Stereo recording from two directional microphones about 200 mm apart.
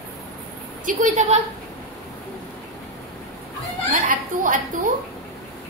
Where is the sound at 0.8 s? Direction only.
35° right (ahead or behind).